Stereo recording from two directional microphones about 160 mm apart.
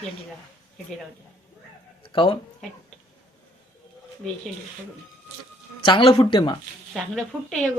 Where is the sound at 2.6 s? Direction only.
5° left (ahead or behind).